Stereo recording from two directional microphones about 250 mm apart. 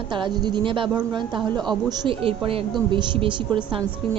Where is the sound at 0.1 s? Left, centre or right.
Centre.